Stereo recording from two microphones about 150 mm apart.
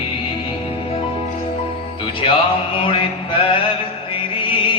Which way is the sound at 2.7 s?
35° left (ahead or behind).